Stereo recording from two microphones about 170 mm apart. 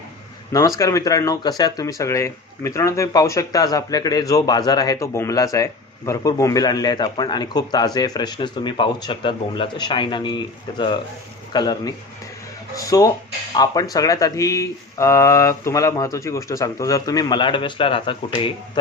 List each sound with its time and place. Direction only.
0.8 s speech: 20° left (ahead or behind)